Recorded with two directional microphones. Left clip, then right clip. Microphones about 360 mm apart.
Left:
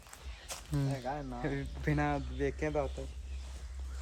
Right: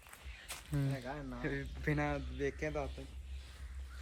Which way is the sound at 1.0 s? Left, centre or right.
Left.